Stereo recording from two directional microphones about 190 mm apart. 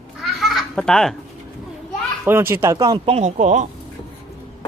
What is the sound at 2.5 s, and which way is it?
Speech, 15° right (ahead or behind).